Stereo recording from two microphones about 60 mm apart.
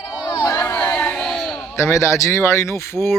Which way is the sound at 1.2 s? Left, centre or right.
Centre.